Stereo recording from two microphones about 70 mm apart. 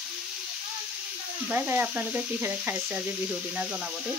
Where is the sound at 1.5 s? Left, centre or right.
Right.